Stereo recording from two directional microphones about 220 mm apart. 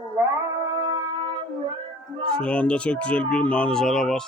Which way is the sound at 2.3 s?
5° left (ahead or behind).